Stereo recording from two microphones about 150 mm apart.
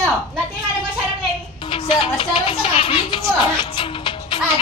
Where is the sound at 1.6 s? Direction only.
35° left (ahead or behind).